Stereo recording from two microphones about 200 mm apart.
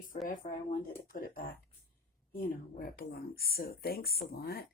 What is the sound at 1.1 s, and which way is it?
Speech, 45° left (ahead or behind).